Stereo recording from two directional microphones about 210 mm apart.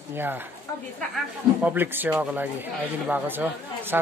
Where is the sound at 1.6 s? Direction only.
10° right (ahead or behind).